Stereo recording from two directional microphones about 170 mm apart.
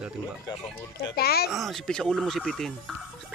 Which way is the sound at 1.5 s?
Centre (ahead or behind).